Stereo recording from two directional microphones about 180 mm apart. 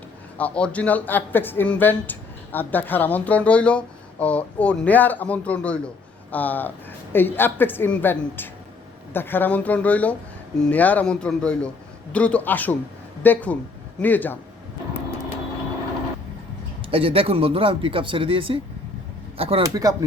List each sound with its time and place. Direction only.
0.3 s speech: 5° left (ahead or behind)
16.9 s speech: 30° right (ahead or behind)
19.6 s speech: 20° right (ahead or behind)